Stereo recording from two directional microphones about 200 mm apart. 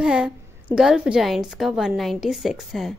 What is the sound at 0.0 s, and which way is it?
A woman's voice, 5° right (ahead or behind).